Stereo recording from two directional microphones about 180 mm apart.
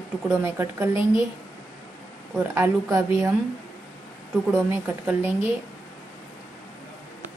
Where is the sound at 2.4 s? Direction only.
15° right (ahead or behind).